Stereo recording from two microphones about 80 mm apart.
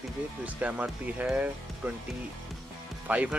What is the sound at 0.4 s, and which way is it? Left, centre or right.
Speech, centre.